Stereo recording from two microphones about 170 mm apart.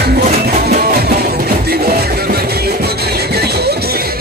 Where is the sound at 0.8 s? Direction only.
60° right (ahead or behind).